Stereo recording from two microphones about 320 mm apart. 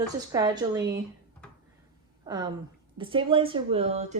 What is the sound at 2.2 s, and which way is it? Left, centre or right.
A woman's voice, centre.